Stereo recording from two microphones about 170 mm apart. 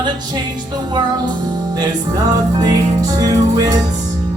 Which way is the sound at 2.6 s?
20° right (ahead or behind).